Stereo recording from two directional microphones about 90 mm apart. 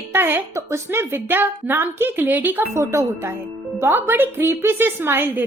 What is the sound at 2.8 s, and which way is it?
Speech, 30° right (ahead or behind).